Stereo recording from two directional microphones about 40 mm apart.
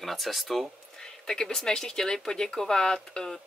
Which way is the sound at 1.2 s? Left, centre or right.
Centre.